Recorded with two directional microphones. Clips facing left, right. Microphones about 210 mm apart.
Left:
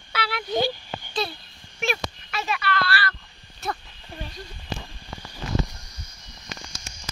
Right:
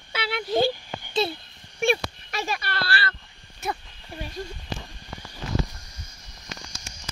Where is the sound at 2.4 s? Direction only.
35° right (ahead or behind).